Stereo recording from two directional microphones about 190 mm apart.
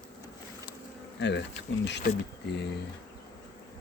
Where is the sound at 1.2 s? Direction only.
65° left (ahead or behind).